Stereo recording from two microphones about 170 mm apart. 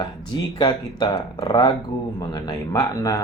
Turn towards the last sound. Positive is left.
turn(degrees=20)  # may be behind; listen again after turning